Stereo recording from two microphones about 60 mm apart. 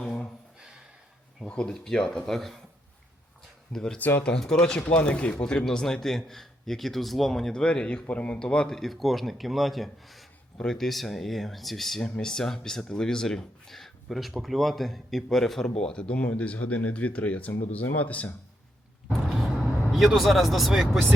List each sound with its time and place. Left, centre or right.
0.0 s a sound: centre
1.5 s speech: centre
3.7 s speech: centre
8.7 s speech: centre; by 18.3 s left
19.0 s vehicle: centre